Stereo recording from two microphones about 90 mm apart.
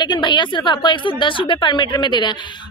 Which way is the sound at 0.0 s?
60° left (ahead or behind).